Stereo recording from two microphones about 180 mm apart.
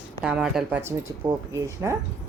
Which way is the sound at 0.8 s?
15° right (ahead or behind).